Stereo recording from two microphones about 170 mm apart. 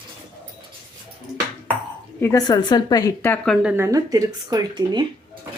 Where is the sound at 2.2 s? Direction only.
20° left (ahead or behind).